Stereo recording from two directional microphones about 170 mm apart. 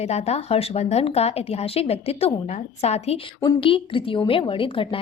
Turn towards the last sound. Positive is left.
turn(degrees=30)  # may be behind; listen again after turning